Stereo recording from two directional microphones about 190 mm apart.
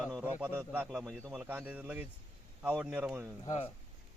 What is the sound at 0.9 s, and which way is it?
Speech, centre (ahead or behind).